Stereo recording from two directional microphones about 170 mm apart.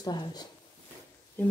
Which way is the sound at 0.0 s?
25° left (ahead or behind).